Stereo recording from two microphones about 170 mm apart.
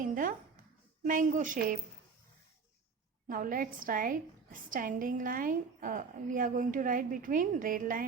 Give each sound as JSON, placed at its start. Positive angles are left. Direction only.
{"t": 0.0, "sound": "a sound", "side_deg": -50}
{"t": 1.0, "sound": "a woman's voice", "side_deg": -50}
{"t": 3.2, "sound": "a woman's voice", "side_deg": -55}